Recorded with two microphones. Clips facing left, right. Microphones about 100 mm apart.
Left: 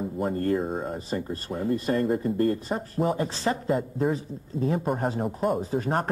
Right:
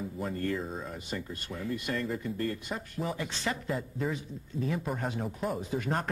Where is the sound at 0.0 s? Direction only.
45° left (ahead or behind).